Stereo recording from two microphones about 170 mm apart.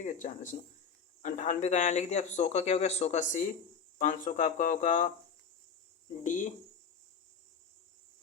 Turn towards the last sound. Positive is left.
turn(degrees=50)  # may be behind; listen again after turning